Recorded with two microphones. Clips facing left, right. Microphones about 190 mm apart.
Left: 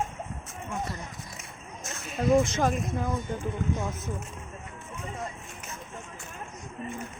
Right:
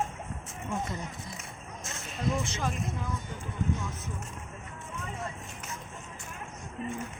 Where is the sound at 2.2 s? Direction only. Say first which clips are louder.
Left 7 dB; 50° left (ahead or behind).